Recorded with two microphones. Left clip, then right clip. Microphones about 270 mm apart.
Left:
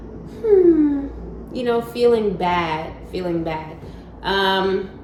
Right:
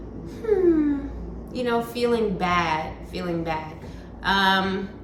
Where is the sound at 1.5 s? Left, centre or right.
Centre.